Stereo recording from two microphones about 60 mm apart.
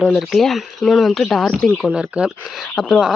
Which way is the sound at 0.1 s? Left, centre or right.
Centre.